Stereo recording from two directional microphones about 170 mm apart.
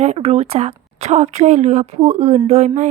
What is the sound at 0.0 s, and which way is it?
A woman's voice, 40° right (ahead or behind).